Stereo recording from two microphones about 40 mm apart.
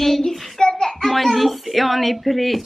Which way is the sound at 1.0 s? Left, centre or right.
Centre.